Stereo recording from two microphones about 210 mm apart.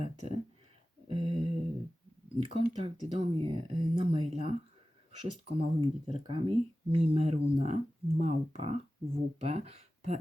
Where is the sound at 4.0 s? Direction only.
30° right (ahead or behind).